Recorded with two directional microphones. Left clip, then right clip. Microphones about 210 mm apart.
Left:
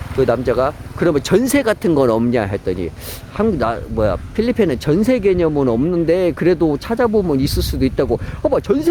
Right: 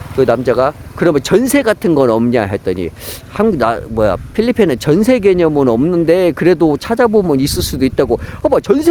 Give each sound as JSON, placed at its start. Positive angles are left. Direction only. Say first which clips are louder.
{"t": 0.2, "sound": "speech", "louder": "right 4 dB", "side_deg": -25}